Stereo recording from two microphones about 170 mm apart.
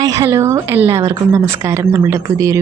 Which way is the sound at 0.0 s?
20° right (ahead or behind).